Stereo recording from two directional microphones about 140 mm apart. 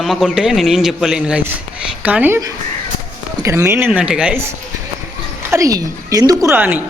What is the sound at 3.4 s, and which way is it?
A man's voice, 20° right (ahead or behind).